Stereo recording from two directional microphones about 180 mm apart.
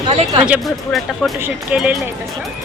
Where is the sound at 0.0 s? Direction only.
30° right (ahead or behind).